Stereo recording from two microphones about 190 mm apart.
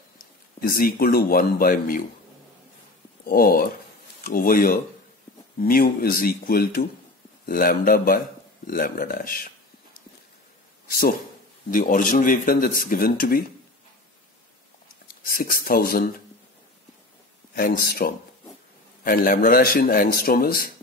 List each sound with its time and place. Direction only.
0.6 s a man's voice: 50° left (ahead or behind)
3.3 s a man's voice: 50° left (ahead or behind)
10.9 s a man's voice: 50° left (ahead or behind)
15.2 s a man's voice: 50° left (ahead or behind)
17.6 s a man's voice: 50° left (ahead or behind)